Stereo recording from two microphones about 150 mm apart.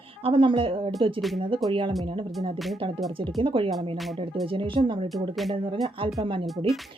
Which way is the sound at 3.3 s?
35° right (ahead or behind).